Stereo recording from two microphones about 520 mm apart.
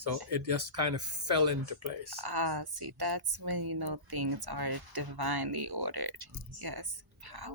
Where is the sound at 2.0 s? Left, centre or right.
Right.